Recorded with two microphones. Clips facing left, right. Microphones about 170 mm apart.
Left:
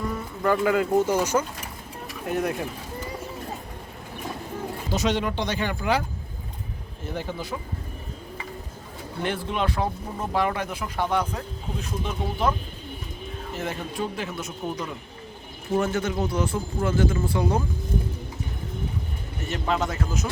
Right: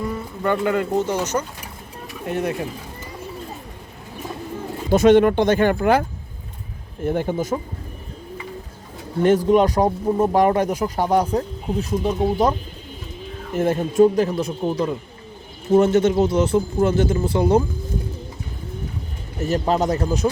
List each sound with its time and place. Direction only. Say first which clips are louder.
0.4 s speech: right 1 dB; centre (ahead or behind)
4.9 s speech: right 13 dB; 55° right (ahead or behind)
9.2 s speech: right 12 dB; 40° right (ahead or behind)
13.5 s speech: right 12 dB; 50° right (ahead or behind); by 14.8 s 35° right (ahead or behind)
15.8 s speech: right 10 dB; 20° right (ahead or behind)
19.4 s speech: right 7 dB; 35° right (ahead or behind)